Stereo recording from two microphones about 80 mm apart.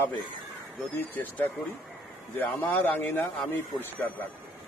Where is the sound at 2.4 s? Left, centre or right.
Left.